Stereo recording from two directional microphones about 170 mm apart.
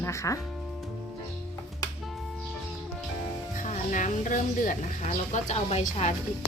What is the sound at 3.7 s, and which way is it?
A woman's voice, 50° left (ahead or behind).